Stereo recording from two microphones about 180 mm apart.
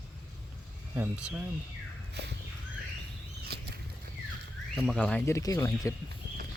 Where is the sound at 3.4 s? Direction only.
60° right (ahead or behind).